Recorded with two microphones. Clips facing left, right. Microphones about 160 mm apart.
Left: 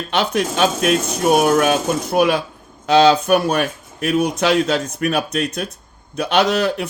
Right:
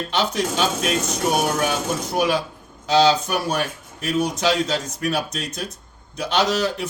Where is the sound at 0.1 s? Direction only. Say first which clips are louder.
Left 5 dB; 60° left (ahead or behind).